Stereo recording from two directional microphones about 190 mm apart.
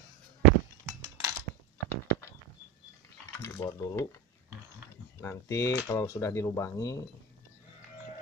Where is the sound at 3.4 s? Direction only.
15° left (ahead or behind).